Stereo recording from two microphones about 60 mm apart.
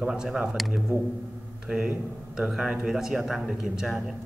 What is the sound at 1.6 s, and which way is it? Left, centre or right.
A man's voice, centre.